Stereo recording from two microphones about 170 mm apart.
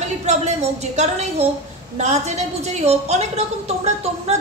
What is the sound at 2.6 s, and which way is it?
A woman's voice, 40° right (ahead or behind).